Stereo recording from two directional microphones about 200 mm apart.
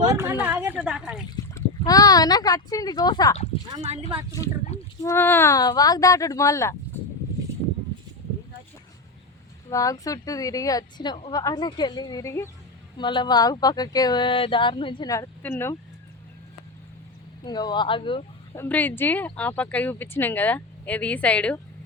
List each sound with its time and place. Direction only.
0.1 s a woman's voice: 10° right (ahead or behind)
1.5 s speech: 15° left (ahead or behind)
3.8 s speech: 30° right (ahead or behind)
4.9 s speech: 15° left (ahead or behind)
9.6 s speech: 15° left (ahead or behind)
17.4 s speech: 20° left (ahead or behind)
18.5 s speech: 10° left (ahead or behind)